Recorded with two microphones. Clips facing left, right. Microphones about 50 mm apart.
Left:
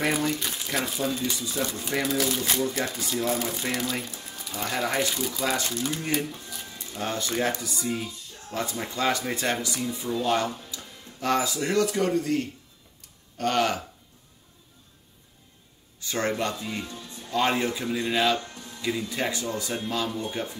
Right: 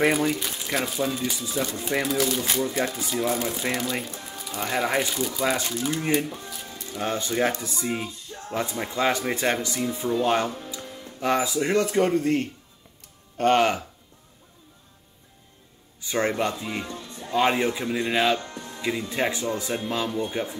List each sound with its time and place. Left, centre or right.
0.1 s speech: centre
4.3 s music: centre
4.6 s speech: centre
6.2 s speech: right
11.7 s speech: right
16.0 s speech: centre
17.1 s music: right
17.4 s speech: centre
18.4 s music: right
18.8 s speech: right